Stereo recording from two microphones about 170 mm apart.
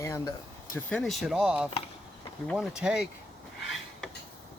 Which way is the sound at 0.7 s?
5° left (ahead or behind).